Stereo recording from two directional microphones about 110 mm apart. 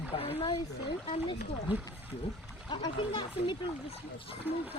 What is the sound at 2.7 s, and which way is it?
Speech, 45° left (ahead or behind).